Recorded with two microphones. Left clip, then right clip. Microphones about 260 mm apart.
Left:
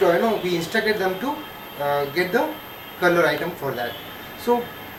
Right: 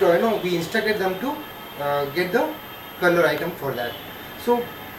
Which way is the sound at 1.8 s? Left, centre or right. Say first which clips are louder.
Left 1 dB; centre.